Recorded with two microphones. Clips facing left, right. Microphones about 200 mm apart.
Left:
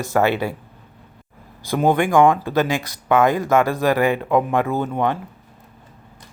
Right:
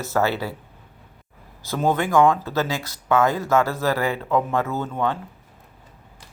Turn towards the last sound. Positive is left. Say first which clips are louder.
# left 4 dB
turn(degrees=15)  # may be behind; listen again after turning